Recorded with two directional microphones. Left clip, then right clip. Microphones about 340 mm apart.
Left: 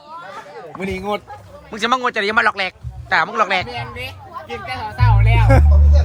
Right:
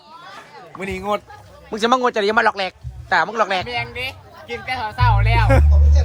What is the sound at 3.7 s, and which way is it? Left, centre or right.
Speech, centre.